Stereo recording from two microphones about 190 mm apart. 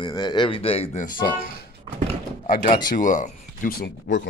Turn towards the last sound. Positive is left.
turn(degrees=50)  # may be behind; listen again after turning